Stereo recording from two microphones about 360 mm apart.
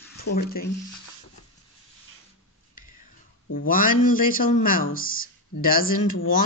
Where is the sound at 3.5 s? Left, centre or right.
Left.